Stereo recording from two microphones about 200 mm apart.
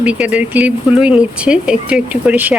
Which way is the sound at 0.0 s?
5° right (ahead or behind).